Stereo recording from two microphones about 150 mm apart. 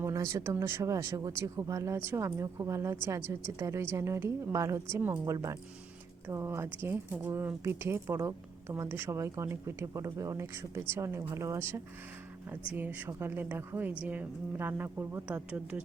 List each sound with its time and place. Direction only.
0.0 s a woman's voice: 20° right (ahead or behind)